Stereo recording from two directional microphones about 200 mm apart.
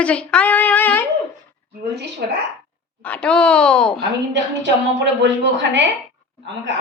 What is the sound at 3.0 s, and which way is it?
A woman's voice, 5° left (ahead or behind).